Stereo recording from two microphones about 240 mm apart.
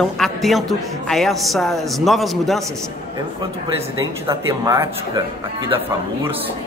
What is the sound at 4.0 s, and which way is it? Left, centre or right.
Speech, centre.